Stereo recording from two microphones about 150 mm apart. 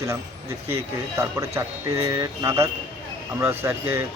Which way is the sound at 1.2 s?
20° right (ahead or behind).